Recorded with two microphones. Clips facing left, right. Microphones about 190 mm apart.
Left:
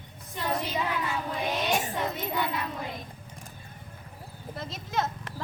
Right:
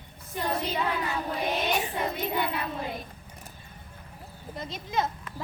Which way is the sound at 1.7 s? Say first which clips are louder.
Even; 45° left (ahead or behind).